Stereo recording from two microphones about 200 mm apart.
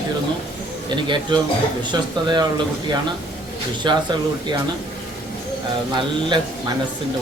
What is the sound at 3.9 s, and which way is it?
Speech, 20° right (ahead or behind).